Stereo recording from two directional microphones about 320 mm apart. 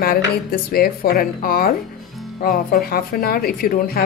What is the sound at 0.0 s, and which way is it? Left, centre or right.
A woman's voice, left.